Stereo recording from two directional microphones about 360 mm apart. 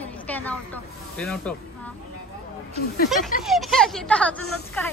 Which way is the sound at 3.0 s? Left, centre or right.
Centre.